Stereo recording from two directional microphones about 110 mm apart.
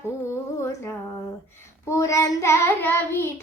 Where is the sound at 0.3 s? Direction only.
25° left (ahead or behind).